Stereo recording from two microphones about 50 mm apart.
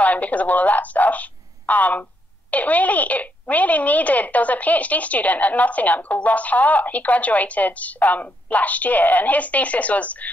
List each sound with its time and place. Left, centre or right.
0.0 s a woman's voice: left